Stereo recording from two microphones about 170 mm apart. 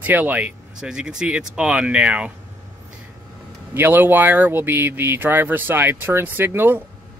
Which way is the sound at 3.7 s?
15° right (ahead or behind).